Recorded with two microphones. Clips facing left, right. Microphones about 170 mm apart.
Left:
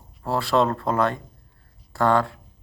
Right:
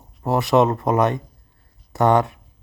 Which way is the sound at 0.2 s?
20° right (ahead or behind).